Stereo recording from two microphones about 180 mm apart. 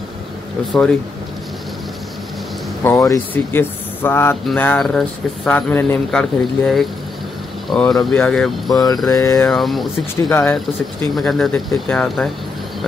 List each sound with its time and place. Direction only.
2.8 s speech: 15° left (ahead or behind)
8.6 s mantra: 20° left (ahead or behind)
9.5 s speech: centre (ahead or behind)
10.3 s speech: 10° left (ahead or behind)
11.1 s speech: centre (ahead or behind)